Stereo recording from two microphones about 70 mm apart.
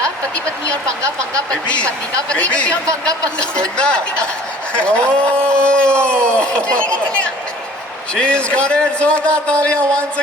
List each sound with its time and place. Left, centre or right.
3.5 s speech: centre
8.3 s speech: centre